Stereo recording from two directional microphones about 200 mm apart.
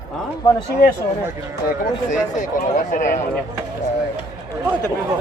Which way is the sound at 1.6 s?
40° left (ahead or behind).